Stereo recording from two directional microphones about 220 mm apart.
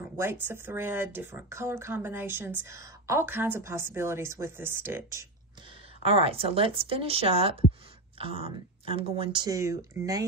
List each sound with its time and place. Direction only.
0.2 s speech: 10° right (ahead or behind)
6.0 s speech: 25° right (ahead or behind)